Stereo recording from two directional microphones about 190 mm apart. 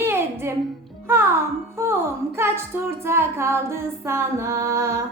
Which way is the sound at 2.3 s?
15° right (ahead or behind).